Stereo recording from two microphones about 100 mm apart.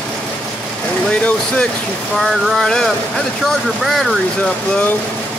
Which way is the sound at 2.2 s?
Centre (ahead or behind).